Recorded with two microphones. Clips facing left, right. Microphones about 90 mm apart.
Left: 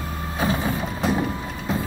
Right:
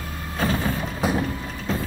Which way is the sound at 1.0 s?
5° right (ahead or behind).